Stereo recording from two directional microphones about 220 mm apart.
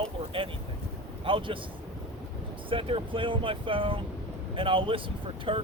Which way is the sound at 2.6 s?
25° right (ahead or behind).